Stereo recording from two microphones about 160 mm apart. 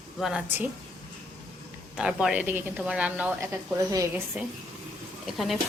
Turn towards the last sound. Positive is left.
turn(degrees=0)  # may be behind; listen again after turning